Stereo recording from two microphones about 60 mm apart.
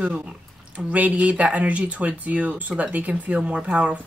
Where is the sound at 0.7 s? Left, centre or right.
Right.